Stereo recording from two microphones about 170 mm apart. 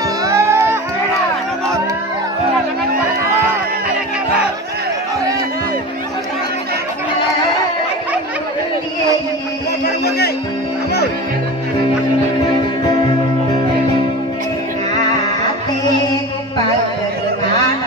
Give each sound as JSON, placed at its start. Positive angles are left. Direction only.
{"t": 0.2, "sound": "music", "side_deg": -15}
{"t": 10.0, "sound": "music", "side_deg": 65}